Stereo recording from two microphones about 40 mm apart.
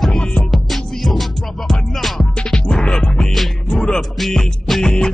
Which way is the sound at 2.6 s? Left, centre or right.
Left.